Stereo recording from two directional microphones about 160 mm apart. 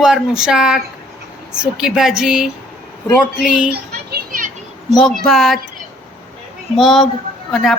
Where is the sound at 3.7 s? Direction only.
75° right (ahead or behind); by 4.6 s 55° right (ahead or behind).